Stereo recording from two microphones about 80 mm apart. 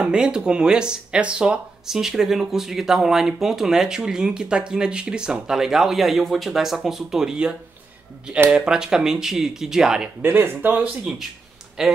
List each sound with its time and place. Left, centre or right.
0.0 s speech: centre
10.2 s speech: right
10.8 s speech: centre